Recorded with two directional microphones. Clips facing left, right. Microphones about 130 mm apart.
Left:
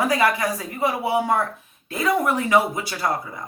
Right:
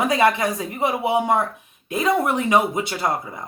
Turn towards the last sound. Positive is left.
turn(degrees=-20)  # may be behind; listen again after turning